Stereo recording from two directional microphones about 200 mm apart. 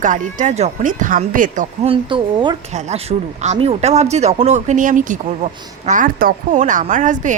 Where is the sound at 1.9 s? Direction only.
25° right (ahead or behind).